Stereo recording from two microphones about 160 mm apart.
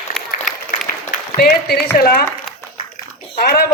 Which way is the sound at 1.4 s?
75° left (ahead or behind).